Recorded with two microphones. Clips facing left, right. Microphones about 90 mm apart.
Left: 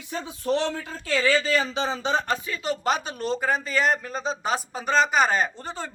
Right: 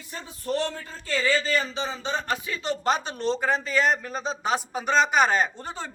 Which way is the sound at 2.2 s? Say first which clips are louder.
Left 1 dB; 15° right (ahead or behind).